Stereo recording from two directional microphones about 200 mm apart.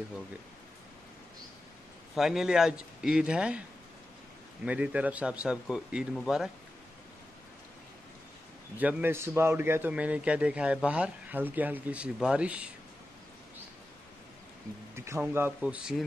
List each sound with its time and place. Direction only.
2.1 s speech: centre (ahead or behind)
4.6 s speech: 5° right (ahead or behind)
8.7 s a man's voice: 10° right (ahead or behind)
15.0 s a man's voice: 10° right (ahead or behind)